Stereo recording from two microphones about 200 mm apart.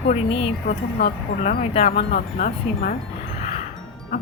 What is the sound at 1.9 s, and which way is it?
Speech, 45° left (ahead or behind).